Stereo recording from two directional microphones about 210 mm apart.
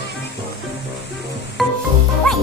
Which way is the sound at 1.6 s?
Centre (ahead or behind).